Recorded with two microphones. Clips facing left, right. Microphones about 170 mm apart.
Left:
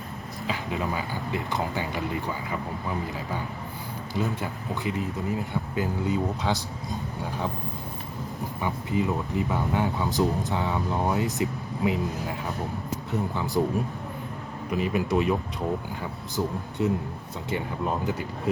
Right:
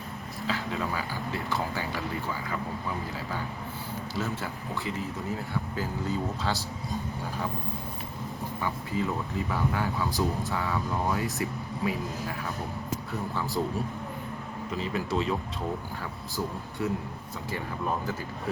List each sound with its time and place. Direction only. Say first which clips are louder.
0.4 s speech: left 2 dB; 15° left (ahead or behind)
4.1 s speech: left 5 dB; 15° left (ahead or behind)
8.6 s speech: left 4 dB; 20° left (ahead or behind)
13.3 s speech: left 2 dB; 20° left (ahead or behind)
14.7 s speech: left 5 dB; 15° left (ahead or behind)